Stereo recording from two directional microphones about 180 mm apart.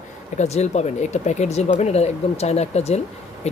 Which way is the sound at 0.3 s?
40° left (ahead or behind).